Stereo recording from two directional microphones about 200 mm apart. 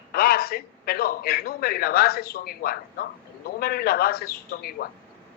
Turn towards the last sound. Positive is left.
turn(degrees=50)  # may be behind; listen again after turning